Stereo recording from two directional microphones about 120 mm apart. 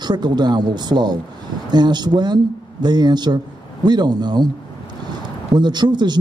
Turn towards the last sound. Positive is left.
turn(degrees=-35)  # may be behind; listen again after turning